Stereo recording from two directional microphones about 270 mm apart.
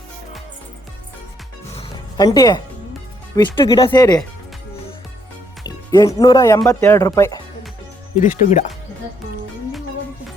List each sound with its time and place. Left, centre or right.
1.7 s music: centre
3.3 s speech: centre
5.6 s speech: centre
8.2 s speech: left